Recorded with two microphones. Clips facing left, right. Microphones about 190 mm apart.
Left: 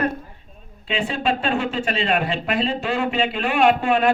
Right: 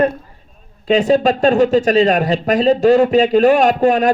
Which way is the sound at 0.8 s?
40° right (ahead or behind).